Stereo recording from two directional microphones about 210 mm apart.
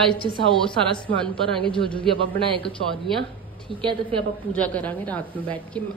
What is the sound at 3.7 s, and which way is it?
A woman's voice, centre (ahead or behind).